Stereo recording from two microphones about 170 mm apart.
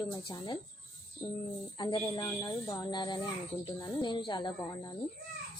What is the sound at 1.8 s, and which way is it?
Speech, 25° left (ahead or behind).